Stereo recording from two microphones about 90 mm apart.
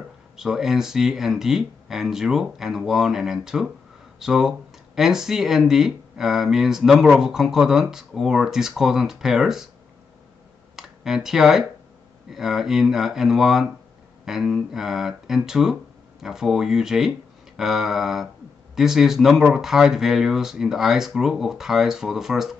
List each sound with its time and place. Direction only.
0.4 s speech: 5° right (ahead or behind)
10.8 s speech: 5° right (ahead or behind)